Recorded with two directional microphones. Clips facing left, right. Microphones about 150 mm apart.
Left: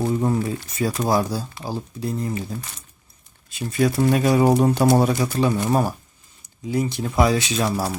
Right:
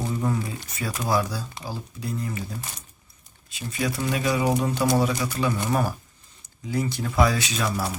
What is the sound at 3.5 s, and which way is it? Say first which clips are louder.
Speech: left 8 dB; 45° left (ahead or behind).